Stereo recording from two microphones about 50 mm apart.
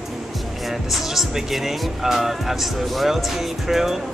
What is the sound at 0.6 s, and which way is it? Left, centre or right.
Speech, centre.